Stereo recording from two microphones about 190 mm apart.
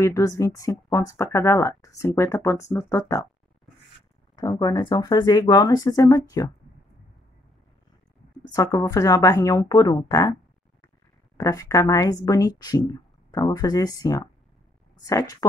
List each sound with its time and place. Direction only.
0.0 s speech: 15° left (ahead or behind)
4.4 s a woman's voice: 20° left (ahead or behind)
8.5 s a woman's voice: 20° left (ahead or behind)
11.3 s a woman's voice: 15° left (ahead or behind)